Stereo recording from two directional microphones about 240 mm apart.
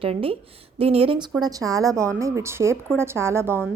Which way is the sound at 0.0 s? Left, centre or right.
Right.